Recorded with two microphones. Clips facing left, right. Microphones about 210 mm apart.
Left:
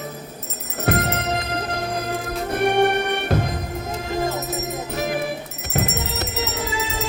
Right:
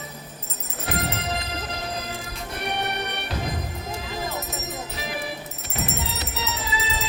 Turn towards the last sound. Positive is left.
turn(degrees=50)  # may be behind; listen again after turning